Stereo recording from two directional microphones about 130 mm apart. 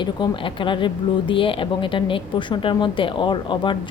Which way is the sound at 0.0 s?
40° left (ahead or behind).